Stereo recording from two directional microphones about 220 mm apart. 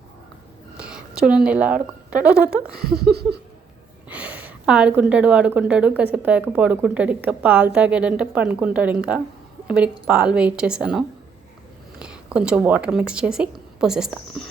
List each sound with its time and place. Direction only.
0.8 s whispering: 5° right (ahead or behind)
1.5 s speech: 5° right (ahead or behind)
2.8 s a sound: 45° right (ahead or behind)
4.1 s a woman's voice: 5° right (ahead or behind)